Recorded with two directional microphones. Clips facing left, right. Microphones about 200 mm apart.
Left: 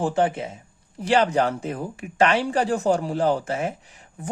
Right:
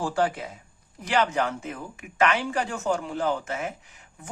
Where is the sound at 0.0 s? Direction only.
20° left (ahead or behind).